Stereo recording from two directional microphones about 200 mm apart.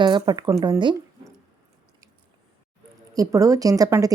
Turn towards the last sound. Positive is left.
turn(degrees=-15)  # may be behind; listen again after turning